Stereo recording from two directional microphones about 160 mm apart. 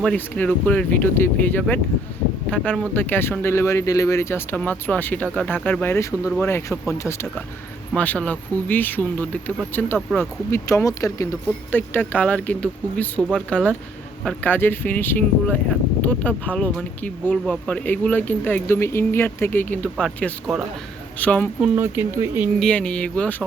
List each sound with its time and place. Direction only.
0.0 s speech: 5° left (ahead or behind)
21.8 s speech: 15° right (ahead or behind)
22.6 s speech: 5° left (ahead or behind)